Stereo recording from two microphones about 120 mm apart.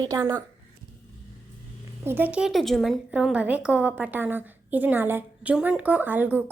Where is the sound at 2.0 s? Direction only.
20° right (ahead or behind); by 2.9 s centre (ahead or behind).